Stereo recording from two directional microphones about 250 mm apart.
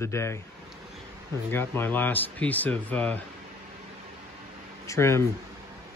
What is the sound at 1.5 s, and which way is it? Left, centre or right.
Speech, centre.